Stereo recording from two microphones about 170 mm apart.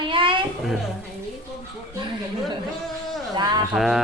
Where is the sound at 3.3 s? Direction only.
25° right (ahead or behind).